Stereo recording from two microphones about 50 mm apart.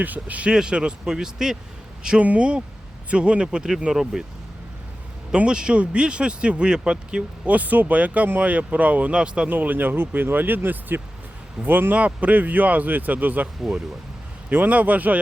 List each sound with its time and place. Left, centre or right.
0.0 s speech: right
0.5 s a man's voice: centre
2.2 s a man's voice: right; by 4.3 s centre
5.5 s speech: centre
9.1 s speech: centre
9.5 s speech: right
11.9 s speech: right
14.5 s speech: right